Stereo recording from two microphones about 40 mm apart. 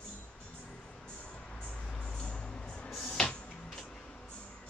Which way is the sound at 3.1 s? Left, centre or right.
Left.